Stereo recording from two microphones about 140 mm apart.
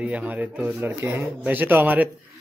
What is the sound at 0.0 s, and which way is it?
Speech, 10° right (ahead or behind).